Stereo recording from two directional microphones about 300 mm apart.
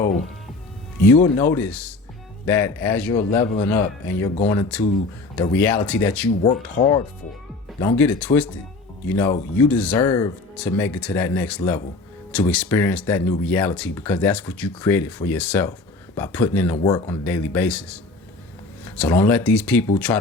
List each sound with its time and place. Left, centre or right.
1.0 s speech: centre
3.2 s a man's voice: centre
5.4 s speech: centre
6.4 s a man's voice: left
7.8 s speech: centre